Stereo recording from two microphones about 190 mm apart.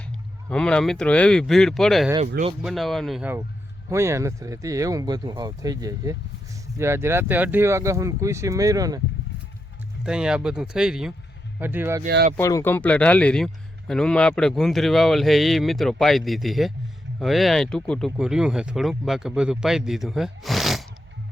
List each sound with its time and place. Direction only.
0.4 s a man's voice: 5° left (ahead or behind); by 9.0 s 20° right (ahead or behind)
10.0 s a man's voice: 5° right (ahead or behind)
12.0 s speech: 50° right (ahead or behind)
12.4 s a man's voice: 15° left (ahead or behind); by 20.8 s centre (ahead or behind)